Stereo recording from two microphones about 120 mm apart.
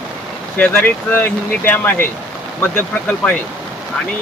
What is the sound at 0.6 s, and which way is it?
Speech, 15° left (ahead or behind).